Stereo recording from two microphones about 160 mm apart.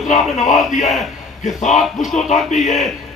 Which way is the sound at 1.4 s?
50° left (ahead or behind).